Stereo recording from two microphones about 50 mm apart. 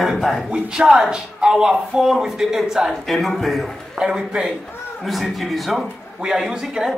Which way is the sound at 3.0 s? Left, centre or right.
Centre.